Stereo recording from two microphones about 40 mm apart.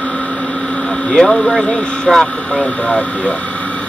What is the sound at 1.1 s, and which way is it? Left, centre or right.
Speech, centre.